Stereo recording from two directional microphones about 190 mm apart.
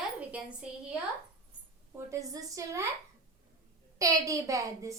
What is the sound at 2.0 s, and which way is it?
Speech, 15° right (ahead or behind).